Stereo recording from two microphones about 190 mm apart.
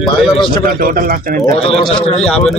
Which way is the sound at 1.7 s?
30° left (ahead or behind).